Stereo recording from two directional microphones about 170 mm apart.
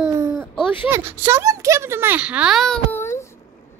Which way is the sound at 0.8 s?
15° right (ahead or behind).